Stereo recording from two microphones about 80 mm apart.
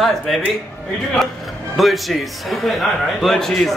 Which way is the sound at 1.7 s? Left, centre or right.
Centre.